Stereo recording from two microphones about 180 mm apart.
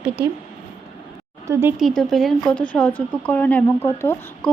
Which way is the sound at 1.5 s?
15° right (ahead or behind).